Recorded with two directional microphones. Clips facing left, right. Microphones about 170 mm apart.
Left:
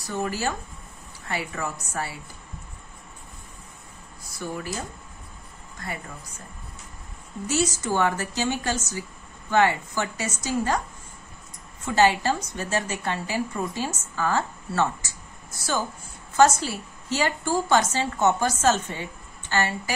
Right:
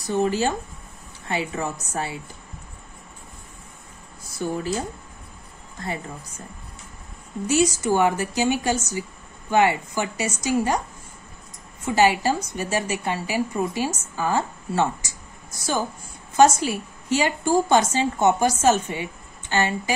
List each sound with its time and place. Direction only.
0.1 s a woman's voice: 20° right (ahead or behind)
7.4 s a woman's voice: 15° right (ahead or behind)
11.8 s a woman's voice: 10° right (ahead or behind)